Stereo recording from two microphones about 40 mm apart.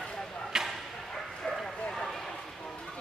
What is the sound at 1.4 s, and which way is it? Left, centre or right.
Bow-wow, centre.